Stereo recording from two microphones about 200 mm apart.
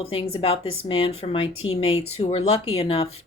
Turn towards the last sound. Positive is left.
turn(degrees=30)  # may be behind; listen again after turning